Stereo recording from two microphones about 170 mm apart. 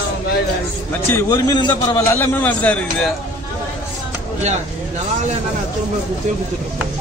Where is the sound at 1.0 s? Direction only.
15° left (ahead or behind).